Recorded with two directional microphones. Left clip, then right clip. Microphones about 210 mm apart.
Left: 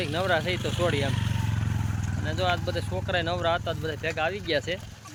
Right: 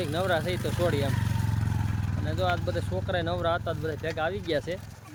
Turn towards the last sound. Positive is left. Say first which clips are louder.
# left 2 dB
turn(degrees=-5)  # may be behind; listen again after turning